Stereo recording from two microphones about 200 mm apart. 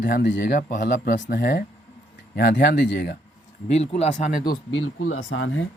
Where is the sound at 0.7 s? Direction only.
45° left (ahead or behind).